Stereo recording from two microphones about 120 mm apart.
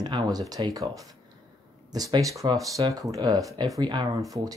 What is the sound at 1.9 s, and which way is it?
Speech, 30° right (ahead or behind).